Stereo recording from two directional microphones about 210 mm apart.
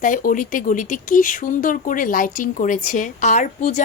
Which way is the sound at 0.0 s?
40° left (ahead or behind).